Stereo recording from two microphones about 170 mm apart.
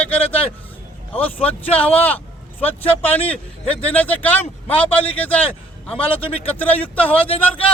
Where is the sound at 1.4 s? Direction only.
10° left (ahead or behind).